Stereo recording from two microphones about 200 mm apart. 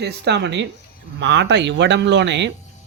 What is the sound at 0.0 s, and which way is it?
A man's voice, 55° right (ahead or behind).